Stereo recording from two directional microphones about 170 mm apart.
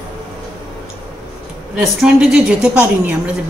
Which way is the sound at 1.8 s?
Centre (ahead or behind).